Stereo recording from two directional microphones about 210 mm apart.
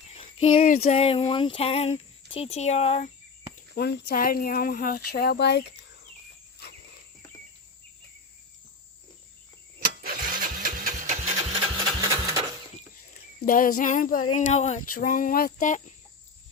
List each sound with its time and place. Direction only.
0.1 s a sound: 30° left (ahead or behind)
3.8 s speech: 50° left (ahead or behind)
10.0 s engine: 45° right (ahead or behind); by 12.4 s 25° right (ahead or behind)
13.4 s speech: 40° left (ahead or behind)